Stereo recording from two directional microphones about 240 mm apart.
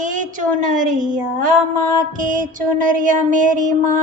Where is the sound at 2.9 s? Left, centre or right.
Right.